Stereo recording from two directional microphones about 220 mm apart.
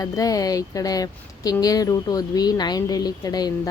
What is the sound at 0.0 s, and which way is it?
Speech, 15° left (ahead or behind).